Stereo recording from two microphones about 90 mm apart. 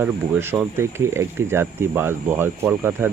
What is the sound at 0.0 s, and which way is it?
Speech, 30° right (ahead or behind).